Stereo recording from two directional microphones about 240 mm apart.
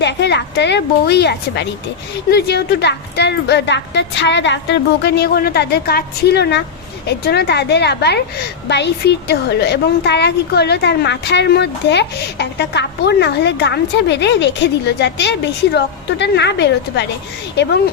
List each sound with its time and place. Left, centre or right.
0.0 s a woman's voice: left